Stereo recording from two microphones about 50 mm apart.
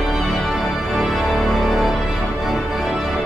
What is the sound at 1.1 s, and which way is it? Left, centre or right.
Music, centre.